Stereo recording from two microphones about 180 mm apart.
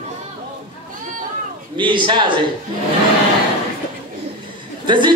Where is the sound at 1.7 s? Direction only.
25° right (ahead or behind).